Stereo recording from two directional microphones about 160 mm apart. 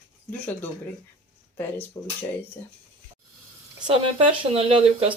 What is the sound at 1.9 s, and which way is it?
Speech, 20° left (ahead or behind).